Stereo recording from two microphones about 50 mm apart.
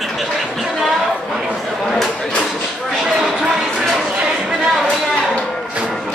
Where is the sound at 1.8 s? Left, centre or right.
Centre.